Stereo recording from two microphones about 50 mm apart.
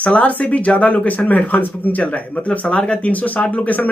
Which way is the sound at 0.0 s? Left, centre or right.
Left.